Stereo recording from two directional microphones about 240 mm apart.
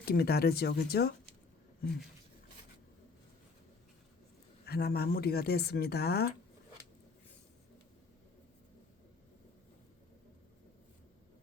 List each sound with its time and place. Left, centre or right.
0.0 s speech: left
4.6 s speech: left